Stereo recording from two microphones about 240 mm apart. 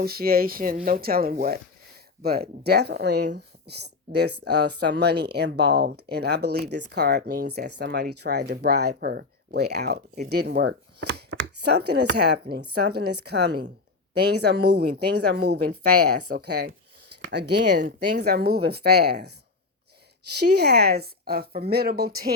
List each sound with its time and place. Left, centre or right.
0.0 s a woman's voice: right
13.0 s a woman's voice: right
13.2 s speech: right
20.6 s a woman's voice: right